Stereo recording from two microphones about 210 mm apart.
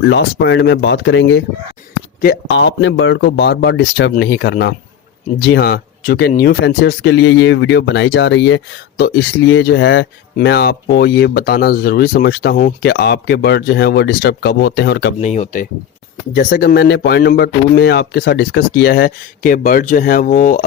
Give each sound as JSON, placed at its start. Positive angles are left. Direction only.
{"t": 0.0, "sound": "speech", "side_deg": 60}
{"t": 15.2, "sound": "speech", "side_deg": 35}
{"t": 16.3, "sound": "speech", "side_deg": 45}